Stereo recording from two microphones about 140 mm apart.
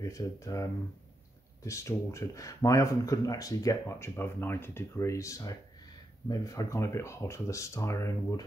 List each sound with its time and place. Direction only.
0.0 s speech: 20° left (ahead or behind)